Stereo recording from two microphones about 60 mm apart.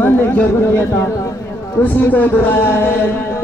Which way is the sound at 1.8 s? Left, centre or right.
Left.